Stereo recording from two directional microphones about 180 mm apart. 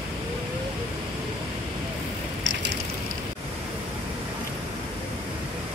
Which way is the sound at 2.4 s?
90° right.